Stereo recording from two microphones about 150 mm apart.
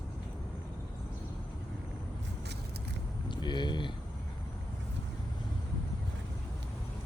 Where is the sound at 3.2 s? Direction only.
30° left (ahead or behind).